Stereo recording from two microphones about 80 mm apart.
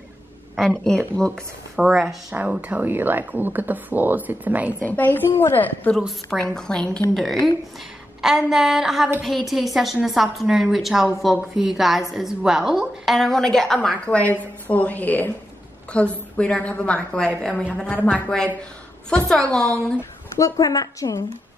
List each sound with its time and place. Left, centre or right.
0.6 s a woman's voice: centre
1.8 s a woman's voice: centre
2.3 s speech: centre
4.8 s a woman's voice: left
6.3 s a woman's voice: centre
20.3 s a woman's voice: left